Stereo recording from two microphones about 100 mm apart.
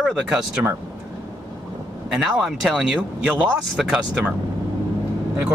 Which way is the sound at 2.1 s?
Centre (ahead or behind).